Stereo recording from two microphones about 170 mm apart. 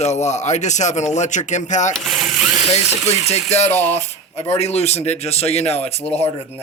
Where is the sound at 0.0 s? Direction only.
40° left (ahead or behind).